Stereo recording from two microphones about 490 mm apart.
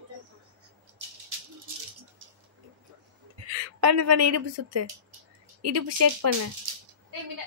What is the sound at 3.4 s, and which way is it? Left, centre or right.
A woman's voice, right.